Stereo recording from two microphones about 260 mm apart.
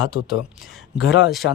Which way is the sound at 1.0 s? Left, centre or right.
Left.